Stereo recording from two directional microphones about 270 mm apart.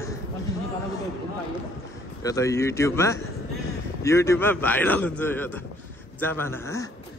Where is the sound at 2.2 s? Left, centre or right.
Centre.